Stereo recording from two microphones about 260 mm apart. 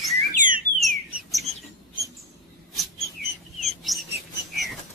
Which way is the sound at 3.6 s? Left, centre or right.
Centre.